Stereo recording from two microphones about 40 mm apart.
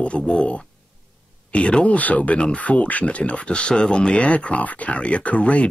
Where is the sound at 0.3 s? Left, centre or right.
Left.